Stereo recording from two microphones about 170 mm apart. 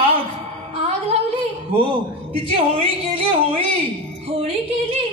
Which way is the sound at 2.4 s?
35° right (ahead or behind).